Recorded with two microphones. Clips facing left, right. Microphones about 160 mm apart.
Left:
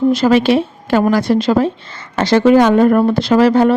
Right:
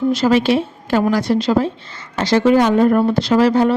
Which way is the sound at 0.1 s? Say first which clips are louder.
Even; 60° left (ahead or behind).